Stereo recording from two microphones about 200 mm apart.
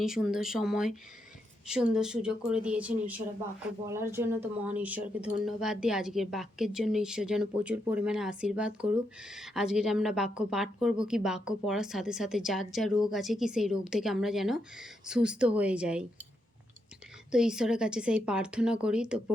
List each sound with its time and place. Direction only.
0.0 s speech: 5° right (ahead or behind)
17.3 s speech: 5° right (ahead or behind)